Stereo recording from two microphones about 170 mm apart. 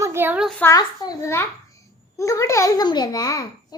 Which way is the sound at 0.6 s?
20° left (ahead or behind).